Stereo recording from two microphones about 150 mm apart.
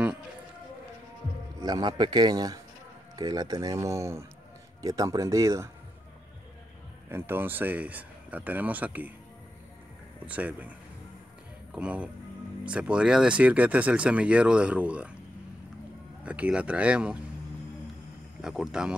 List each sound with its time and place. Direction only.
1.6 s speech: 25° right (ahead or behind)
7.1 s speech: 15° right (ahead or behind)
10.2 s speech: 10° right (ahead or behind)
11.7 s speech: 10° right (ahead or behind)
16.3 s speech: 10° right (ahead or behind)
18.4 s speech: 5° right (ahead or behind)